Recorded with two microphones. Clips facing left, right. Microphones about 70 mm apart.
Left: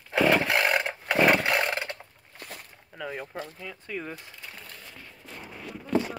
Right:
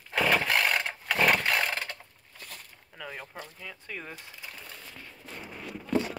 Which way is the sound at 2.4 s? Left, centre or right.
Left.